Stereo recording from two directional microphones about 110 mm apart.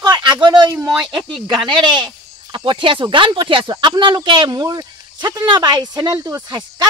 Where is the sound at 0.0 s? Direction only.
40° right (ahead or behind).